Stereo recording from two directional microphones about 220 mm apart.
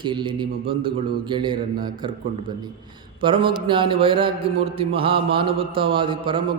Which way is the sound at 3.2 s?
25° right (ahead or behind).